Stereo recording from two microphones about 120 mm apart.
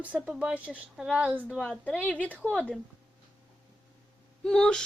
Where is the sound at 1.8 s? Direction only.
15° left (ahead or behind).